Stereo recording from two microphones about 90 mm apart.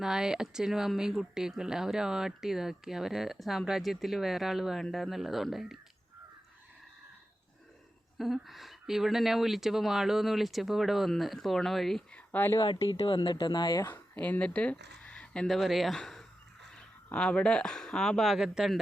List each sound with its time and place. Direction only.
0.0 s speech: 5° right (ahead or behind)
8.2 s speech: centre (ahead or behind)
12.1 s a sound: 20° left (ahead or behind)
12.6 s speech: 70° left (ahead or behind); by 13.9 s 50° left (ahead or behind)
13.9 s speech: 15° left (ahead or behind)
15.4 s speech: centre (ahead or behind)